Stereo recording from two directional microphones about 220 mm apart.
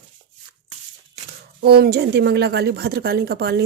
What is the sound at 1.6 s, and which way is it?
Speech, 45° right (ahead or behind).